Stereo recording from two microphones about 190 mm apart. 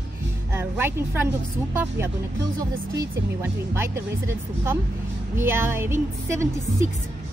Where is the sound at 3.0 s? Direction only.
15° right (ahead or behind).